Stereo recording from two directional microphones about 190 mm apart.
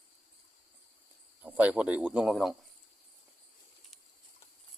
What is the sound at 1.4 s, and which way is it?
Speech, 10° right (ahead or behind).